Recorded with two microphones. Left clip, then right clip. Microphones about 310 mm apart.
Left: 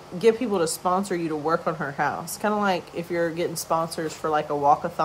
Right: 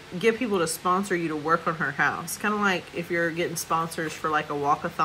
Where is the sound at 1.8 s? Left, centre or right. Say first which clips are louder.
Right 2 dB; left.